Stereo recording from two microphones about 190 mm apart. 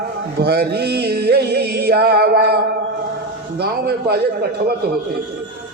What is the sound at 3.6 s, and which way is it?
Speech, 60° right (ahead or behind).